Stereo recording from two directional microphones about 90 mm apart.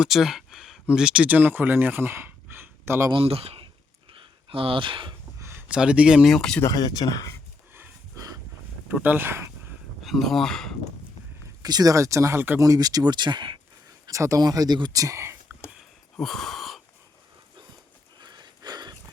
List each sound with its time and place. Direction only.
0.0 s speech: 5° right (ahead or behind); by 3.1 s 25° right (ahead or behind)
3.1 s speech: 90° right
4.2 s speech: 75° right (ahead or behind)
5.4 s a sound: 30° right (ahead or behind)
5.6 s speech: 10° right (ahead or behind)
6.2 s speech: 5° left (ahead or behind)
6.6 s speech: 45° left (ahead or behind)
8.1 s dog: 40° right (ahead or behind)
8.9 s speech: 20° right (ahead or behind)
10.0 s speech: centre (ahead or behind)
11.4 s speech: 45° right (ahead or behind)
14.1 s speech: 35° right (ahead or behind)
16.1 s a sound: 5° left (ahead or behind)
18.2 s a sound: 55° right (ahead or behind)